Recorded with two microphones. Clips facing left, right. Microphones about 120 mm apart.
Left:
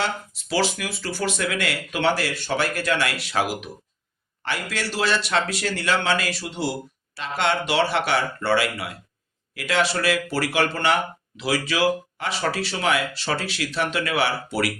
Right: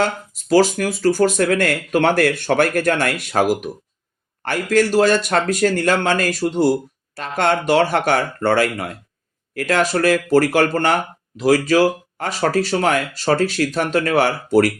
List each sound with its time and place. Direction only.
0.0 s speech: 45° right (ahead or behind)